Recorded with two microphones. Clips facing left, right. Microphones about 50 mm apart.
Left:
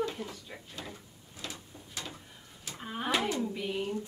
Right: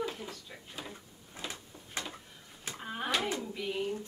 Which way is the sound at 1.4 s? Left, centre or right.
Centre.